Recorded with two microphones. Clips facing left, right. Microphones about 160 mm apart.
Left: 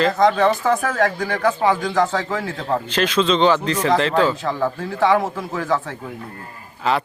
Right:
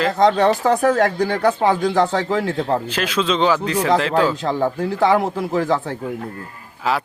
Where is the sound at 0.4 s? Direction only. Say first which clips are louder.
Right 3 dB; 35° right (ahead or behind).